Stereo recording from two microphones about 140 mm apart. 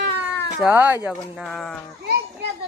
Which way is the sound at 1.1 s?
Centre (ahead or behind).